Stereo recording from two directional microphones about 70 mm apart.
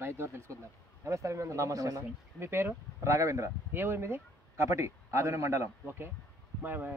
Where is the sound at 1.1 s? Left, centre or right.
Right.